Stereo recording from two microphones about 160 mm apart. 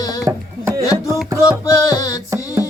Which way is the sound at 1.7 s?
20° left (ahead or behind).